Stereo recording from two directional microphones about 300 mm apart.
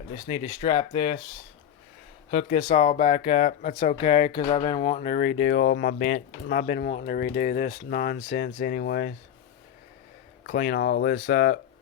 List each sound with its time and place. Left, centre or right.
0.3 s speech: left
2.3 s speech: left
10.4 s speech: left